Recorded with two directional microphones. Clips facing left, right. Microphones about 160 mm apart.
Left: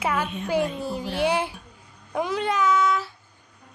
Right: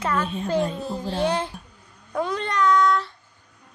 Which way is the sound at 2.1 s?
10° left (ahead or behind).